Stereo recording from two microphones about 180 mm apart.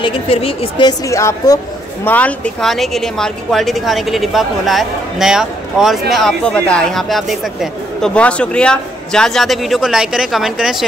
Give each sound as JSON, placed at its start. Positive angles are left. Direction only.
{"t": 0.0, "sound": "speech", "side_deg": 30}